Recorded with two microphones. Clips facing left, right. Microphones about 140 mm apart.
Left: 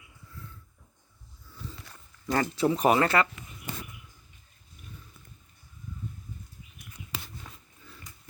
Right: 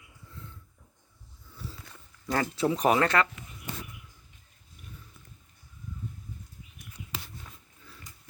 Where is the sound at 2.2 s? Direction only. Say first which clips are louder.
Left 2 dB; centre (ahead or behind).